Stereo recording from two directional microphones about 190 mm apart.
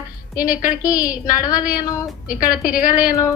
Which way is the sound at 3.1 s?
15° left (ahead or behind).